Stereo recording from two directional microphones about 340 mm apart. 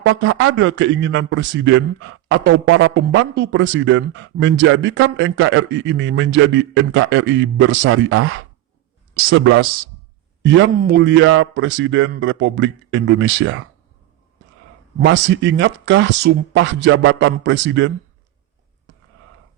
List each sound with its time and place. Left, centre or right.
0.0 s a man's voice: right
15.0 s a man's voice: right